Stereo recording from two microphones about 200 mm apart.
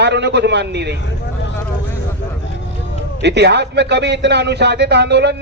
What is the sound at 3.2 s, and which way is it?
A man's voice, 60° right (ahead or behind).